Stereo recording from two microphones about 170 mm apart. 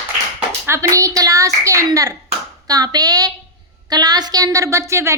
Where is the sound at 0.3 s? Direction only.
10° right (ahead or behind).